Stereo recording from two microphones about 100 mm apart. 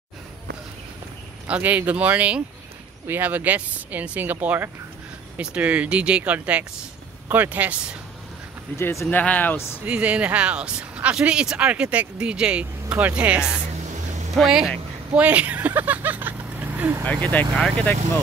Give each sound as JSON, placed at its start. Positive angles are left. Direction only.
{"t": 1.5, "sound": "speech", "side_deg": -15}
{"t": 8.7, "sound": "speech", "side_deg": 25}
{"t": 9.1, "sound": "speech", "side_deg": 15}
{"t": 9.8, "sound": "speech", "side_deg": -15}
{"t": 14.3, "sound": "speech", "side_deg": 0}
{"t": 15.1, "sound": "speech", "side_deg": -15}
{"t": 17.0, "sound": "speech", "side_deg": 10}